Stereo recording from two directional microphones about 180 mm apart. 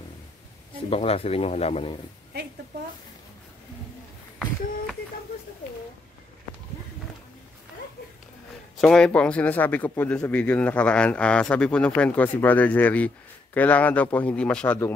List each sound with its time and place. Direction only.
0.8 s speech: 35° left (ahead or behind)
8.8 s speech: 5° left (ahead or behind)